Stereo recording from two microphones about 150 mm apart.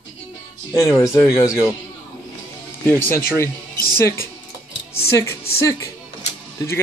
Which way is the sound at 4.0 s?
20° left (ahead or behind).